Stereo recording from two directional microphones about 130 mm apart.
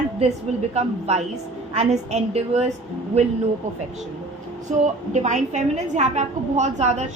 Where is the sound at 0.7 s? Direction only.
55° right (ahead or behind).